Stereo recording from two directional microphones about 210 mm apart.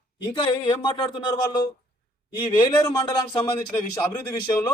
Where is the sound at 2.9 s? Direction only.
20° left (ahead or behind).